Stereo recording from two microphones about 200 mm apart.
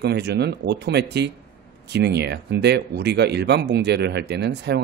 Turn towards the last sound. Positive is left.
turn(degrees=-55)  # may be behind; listen again after turning